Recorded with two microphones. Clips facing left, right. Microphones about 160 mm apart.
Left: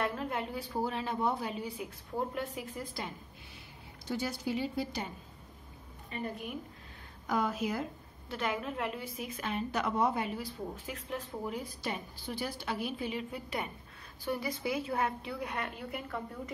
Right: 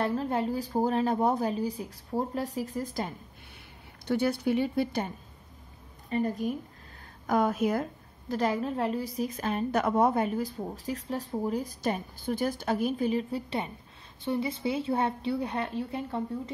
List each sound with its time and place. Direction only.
0.0 s a woman's voice: 35° right (ahead or behind)
4.1 s a woman's voice: 60° right (ahead or behind)
6.0 s a woman's voice: 40° right (ahead or behind)
7.2 s speech: 50° right (ahead or behind)
8.3 s a woman's voice: 35° right (ahead or behind)